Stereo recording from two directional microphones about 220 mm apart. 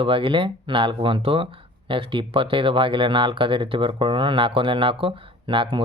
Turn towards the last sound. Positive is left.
turn(degrees=-20)  # may be behind; listen again after turning